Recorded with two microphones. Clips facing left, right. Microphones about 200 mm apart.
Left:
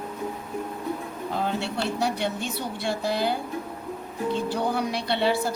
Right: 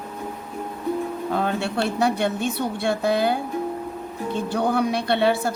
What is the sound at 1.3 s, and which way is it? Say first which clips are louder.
A woman's voice: right 3 dB; 60° right (ahead or behind).